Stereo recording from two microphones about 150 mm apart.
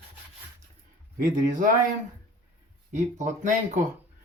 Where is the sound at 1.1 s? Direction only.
65° right (ahead or behind).